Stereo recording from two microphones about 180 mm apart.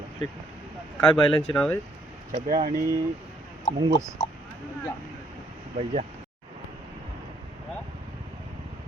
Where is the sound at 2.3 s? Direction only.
55° right (ahead or behind).